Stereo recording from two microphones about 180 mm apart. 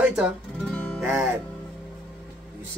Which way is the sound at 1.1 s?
5° right (ahead or behind).